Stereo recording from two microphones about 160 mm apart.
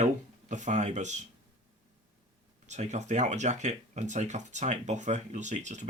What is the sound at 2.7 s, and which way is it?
Speech, 45° right (ahead or behind).